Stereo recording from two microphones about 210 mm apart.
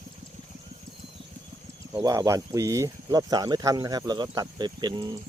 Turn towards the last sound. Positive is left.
turn(degrees=-20)  # may be behind; listen again after turning